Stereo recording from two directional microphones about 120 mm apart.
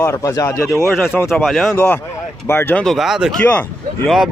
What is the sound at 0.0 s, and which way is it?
Speech, 25° left (ahead or behind).